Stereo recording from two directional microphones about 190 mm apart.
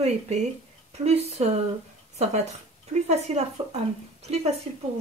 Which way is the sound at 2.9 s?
35° right (ahead or behind).